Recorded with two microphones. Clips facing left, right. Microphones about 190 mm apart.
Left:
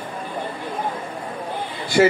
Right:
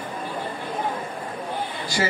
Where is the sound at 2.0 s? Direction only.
55° left (ahead or behind).